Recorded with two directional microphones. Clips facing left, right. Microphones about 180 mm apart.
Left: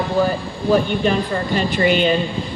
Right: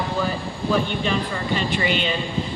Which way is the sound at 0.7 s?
45° left (ahead or behind).